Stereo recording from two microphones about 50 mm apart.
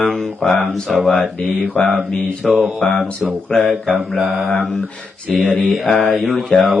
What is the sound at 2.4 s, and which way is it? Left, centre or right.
Mantra, centre.